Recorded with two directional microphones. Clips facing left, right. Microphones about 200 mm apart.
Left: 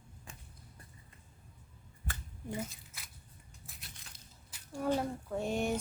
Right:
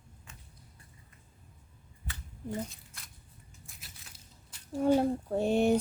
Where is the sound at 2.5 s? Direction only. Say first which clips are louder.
Right 2 dB; 5° left (ahead or behind).